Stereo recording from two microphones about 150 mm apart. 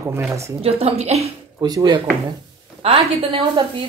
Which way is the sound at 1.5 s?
25° right (ahead or behind).